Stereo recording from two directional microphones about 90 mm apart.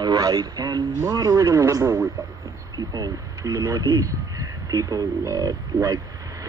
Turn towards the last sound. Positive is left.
turn(degrees=-40)  # may be behind; listen again after turning